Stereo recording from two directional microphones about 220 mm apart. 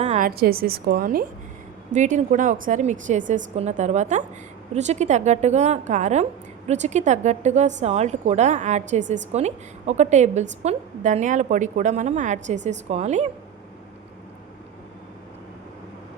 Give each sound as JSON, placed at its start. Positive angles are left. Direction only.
{"t": 0.0, "sound": "a woman's voice", "side_deg": -35}